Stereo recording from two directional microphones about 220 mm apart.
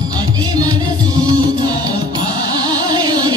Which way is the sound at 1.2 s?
20° right (ahead or behind).